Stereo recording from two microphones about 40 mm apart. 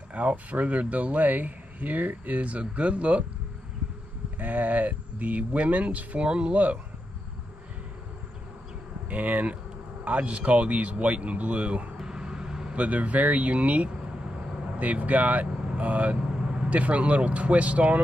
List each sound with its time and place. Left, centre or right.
0.1 s speech: right
4.4 s speech: right
9.1 s speech: right
12.0 s vehicle: centre
12.7 s speech: right
15.4 s vehicle: right
15.8 s speech: right
16.2 s speech: right